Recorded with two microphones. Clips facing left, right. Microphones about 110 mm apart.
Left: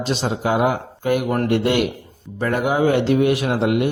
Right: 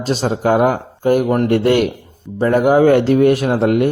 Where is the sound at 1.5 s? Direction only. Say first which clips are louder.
Right 5 dB; 45° right (ahead or behind).